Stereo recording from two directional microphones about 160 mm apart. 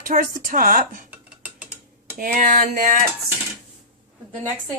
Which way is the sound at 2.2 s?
55° right (ahead or behind).